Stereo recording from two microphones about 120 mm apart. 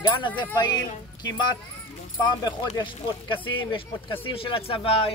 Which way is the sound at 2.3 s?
40° left (ahead or behind).